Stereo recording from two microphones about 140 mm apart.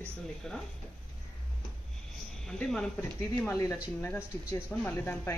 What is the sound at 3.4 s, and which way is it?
A woman's voice, 20° left (ahead or behind).